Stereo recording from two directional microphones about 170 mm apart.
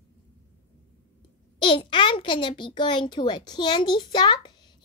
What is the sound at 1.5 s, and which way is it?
A child's voice, 30° left (ahead or behind).